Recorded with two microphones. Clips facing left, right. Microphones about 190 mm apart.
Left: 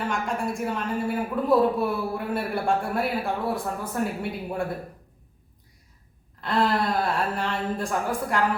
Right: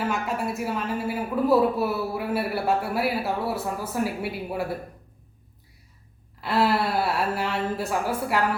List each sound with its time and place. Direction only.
0.0 s a woman's voice: 5° right (ahead or behind)
6.4 s speech: 5° right (ahead or behind)